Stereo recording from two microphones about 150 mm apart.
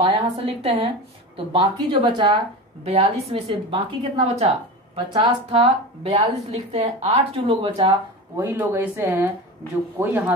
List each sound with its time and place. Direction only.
0.0 s a woman's voice: 40° right (ahead or behind)
5.6 s a woman's voice: 45° right (ahead or behind)
8.4 s speech: 15° right (ahead or behind)